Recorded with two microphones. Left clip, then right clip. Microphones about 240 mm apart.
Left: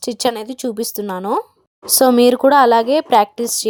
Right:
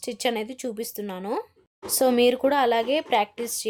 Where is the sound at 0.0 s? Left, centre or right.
Left.